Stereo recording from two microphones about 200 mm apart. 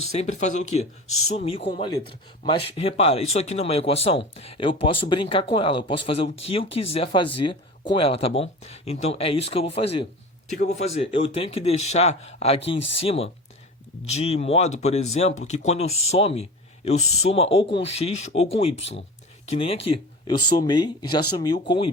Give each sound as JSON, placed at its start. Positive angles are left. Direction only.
{"t": 0.0, "sound": "speech", "side_deg": 30}